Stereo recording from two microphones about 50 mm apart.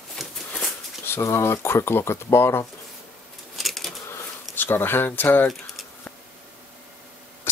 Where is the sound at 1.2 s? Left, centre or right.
Left.